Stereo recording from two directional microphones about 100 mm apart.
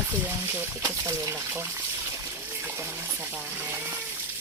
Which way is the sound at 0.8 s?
35° right (ahead or behind).